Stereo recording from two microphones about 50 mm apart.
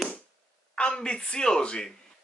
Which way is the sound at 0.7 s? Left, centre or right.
Centre.